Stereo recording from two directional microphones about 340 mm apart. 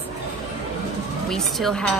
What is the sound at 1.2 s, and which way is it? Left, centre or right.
Speech, centre.